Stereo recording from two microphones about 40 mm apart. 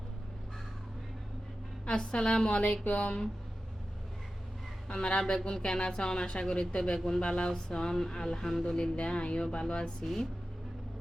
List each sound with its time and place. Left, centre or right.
2.0 s speech: centre
4.9 s speech: left
7.2 s speech: left
10.0 s speech: centre